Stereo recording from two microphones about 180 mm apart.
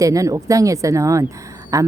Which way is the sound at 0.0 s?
20° right (ahead or behind).